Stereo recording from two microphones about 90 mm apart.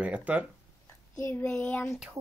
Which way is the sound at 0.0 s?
15° right (ahead or behind).